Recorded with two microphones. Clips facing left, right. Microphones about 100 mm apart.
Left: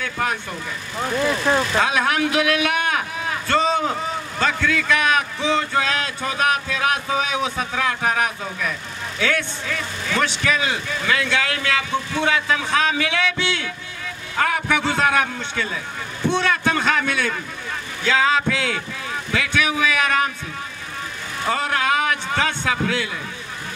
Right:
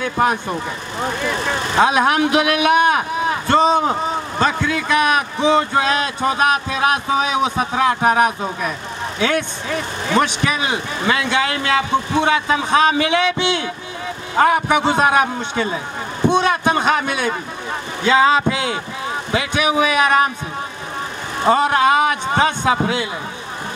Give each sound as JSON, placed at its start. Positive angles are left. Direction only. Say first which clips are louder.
{"t": 0.0, "sound": "vehicle", "louder": "right 7 dB", "side_deg": -25}
{"t": 9.2, "sound": "a man's voice", "louder": "right 3 dB", "side_deg": -25}
{"t": 21.4, "sound": "speech", "louder": "right 8 dB", "side_deg": -25}